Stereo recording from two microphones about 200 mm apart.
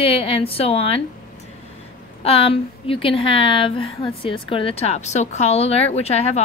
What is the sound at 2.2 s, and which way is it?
A woman's voice, 30° left (ahead or behind).